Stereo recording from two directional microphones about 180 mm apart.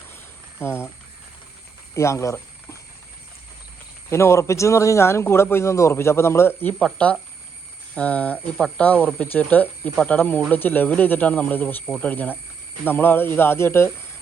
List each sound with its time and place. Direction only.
0.6 s speech: 15° left (ahead or behind)
2.0 s speech: 15° left (ahead or behind)
4.1 s speech: 15° left (ahead or behind)